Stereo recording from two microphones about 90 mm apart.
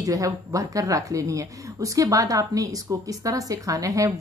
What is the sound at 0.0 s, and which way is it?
A woman's voice, 40° right (ahead or behind).